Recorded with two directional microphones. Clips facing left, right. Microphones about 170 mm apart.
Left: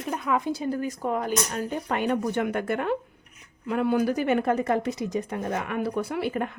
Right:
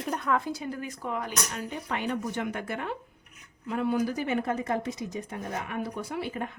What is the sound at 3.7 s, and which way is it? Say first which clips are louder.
Speech: left 4 dB; 65° left (ahead or behind).